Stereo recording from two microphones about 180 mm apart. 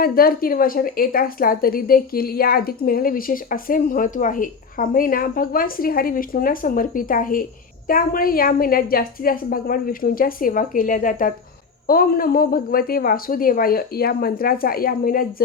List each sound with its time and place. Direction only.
0.0 s a woman's voice: 55° left (ahead or behind)